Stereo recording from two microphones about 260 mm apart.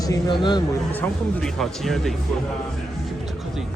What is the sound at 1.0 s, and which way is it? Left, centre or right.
Speech, centre.